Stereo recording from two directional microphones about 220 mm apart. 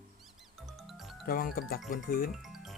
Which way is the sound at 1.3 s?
40° left (ahead or behind).